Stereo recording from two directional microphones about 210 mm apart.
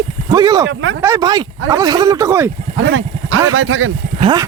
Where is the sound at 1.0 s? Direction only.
15° right (ahead or behind).